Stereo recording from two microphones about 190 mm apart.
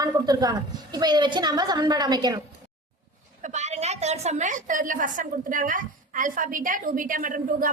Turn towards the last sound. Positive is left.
turn(degrees=-45)  # may be behind; listen again after turning